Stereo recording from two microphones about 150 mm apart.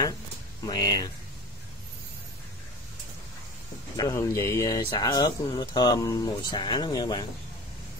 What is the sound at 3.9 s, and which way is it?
Speech, 20° left (ahead or behind).